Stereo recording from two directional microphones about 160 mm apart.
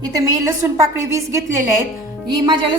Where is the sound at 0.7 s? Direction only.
20° right (ahead or behind).